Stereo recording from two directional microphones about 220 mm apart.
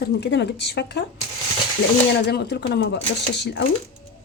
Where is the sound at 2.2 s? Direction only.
50° left (ahead or behind).